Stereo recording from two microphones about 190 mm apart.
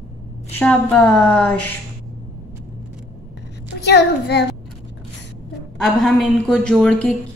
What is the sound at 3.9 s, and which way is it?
Speech, 60° left (ahead or behind).